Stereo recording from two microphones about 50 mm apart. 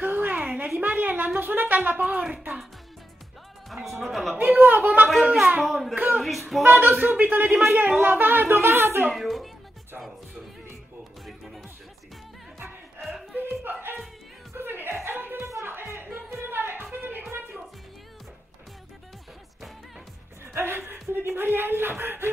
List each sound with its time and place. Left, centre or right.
0.0 s a sound: right
1.4 s speech: right
3.7 s speech: centre
4.4 s speech: right
5.6 s speech: centre
5.9 s speech: right
7.4 s a man's voice: centre
8.0 s speech: right
9.1 s speech: centre
11.2 s music: centre
13.4 s music: right
20.5 s a sound: right
21.1 s speech: right